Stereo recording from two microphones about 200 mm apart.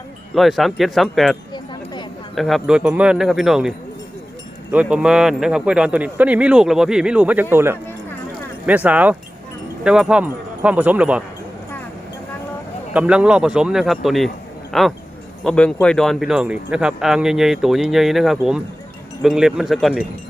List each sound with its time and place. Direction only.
0.3 s speech: centre (ahead or behind)
1.5 s a sound: 20° left (ahead or behind)
2.3 s speech: centre (ahead or behind)
12.9 s speech: 5° right (ahead or behind)